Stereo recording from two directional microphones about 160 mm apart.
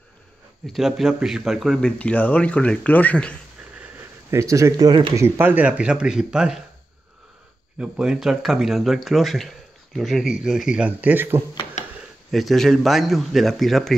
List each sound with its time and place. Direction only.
0.7 s speech: centre (ahead or behind)
3.7 s a sound: 15° right (ahead or behind)
5.2 s speech: 10° right (ahead or behind)
7.8 s speech: 5° right (ahead or behind)
12.3 s speech: centre (ahead or behind)